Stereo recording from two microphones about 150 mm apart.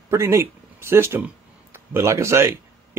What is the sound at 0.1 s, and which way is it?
Speech, 20° right (ahead or behind).